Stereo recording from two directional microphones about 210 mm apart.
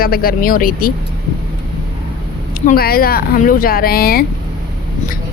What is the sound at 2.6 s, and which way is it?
Speech, 45° left (ahead or behind).